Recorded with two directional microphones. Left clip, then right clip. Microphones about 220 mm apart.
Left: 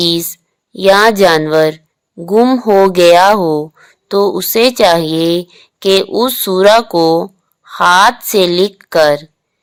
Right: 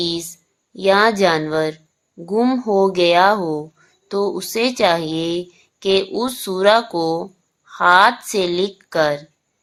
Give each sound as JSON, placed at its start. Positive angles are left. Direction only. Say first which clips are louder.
{"t": 0.0, "sound": "a woman's voice", "louder": "left 9 dB", "side_deg": 40}